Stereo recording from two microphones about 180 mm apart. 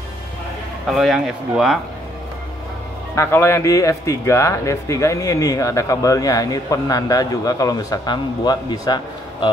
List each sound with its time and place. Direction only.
0.8 s speech: centre (ahead or behind)
3.2 s speech: 15° left (ahead or behind)